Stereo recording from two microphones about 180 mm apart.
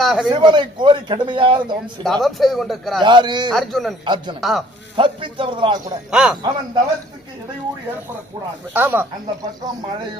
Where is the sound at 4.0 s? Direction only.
25° right (ahead or behind).